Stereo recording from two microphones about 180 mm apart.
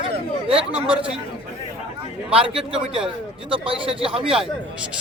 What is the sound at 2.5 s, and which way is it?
Speech, 5° right (ahead or behind).